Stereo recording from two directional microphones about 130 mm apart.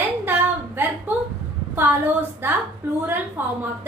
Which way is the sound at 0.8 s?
15° right (ahead or behind).